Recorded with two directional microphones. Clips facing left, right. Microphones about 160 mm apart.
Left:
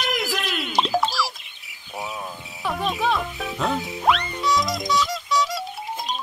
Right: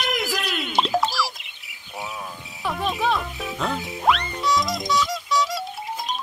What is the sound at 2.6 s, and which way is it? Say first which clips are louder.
Frog: even; centre (ahead or behind).